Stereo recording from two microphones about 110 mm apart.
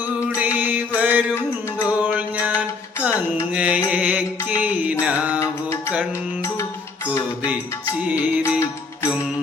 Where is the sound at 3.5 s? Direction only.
10° right (ahead or behind).